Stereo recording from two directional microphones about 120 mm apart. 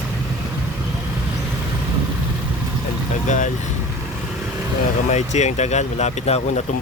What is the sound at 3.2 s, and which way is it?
Speech, 90° left.